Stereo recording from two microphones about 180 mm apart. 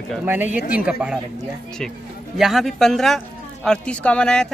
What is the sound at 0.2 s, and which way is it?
A man's voice, 10° right (ahead or behind).